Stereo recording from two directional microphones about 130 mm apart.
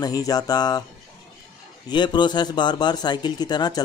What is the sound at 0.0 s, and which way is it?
Speech, 30° left (ahead or behind).